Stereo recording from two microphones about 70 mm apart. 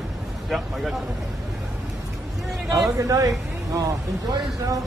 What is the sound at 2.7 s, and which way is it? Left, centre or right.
A man's voice, right.